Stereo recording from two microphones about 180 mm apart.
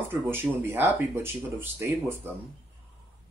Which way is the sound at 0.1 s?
10° right (ahead or behind).